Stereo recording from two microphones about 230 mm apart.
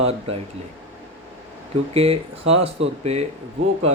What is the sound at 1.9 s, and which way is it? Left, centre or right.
Speech, right.